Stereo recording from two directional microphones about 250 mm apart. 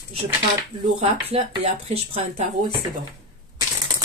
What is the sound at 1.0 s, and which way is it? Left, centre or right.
Speech, right.